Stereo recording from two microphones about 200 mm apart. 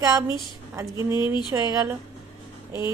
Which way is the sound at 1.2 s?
20° left (ahead or behind).